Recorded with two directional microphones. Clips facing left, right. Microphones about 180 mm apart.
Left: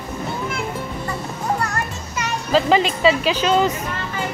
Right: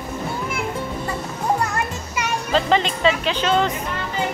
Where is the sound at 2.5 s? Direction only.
5° left (ahead or behind).